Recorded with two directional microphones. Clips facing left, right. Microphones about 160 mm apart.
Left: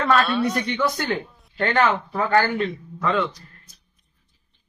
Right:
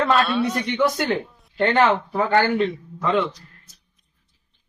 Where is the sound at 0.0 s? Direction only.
Centre (ahead or behind).